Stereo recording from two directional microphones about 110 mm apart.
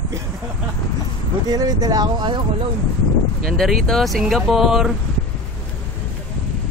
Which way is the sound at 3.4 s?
Centre (ahead or behind).